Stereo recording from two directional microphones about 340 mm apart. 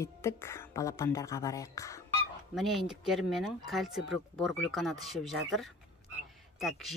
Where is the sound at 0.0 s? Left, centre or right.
Centre.